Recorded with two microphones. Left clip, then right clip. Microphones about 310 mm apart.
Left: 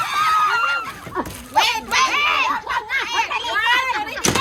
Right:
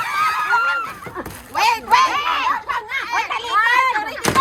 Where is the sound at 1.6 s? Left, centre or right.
Centre.